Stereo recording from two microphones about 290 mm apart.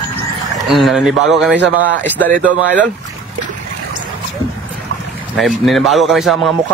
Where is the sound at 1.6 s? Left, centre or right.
Right.